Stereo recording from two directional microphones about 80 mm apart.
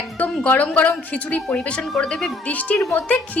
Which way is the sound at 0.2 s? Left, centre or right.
Centre.